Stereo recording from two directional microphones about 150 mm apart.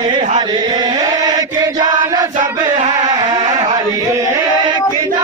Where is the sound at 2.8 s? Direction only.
25° right (ahead or behind).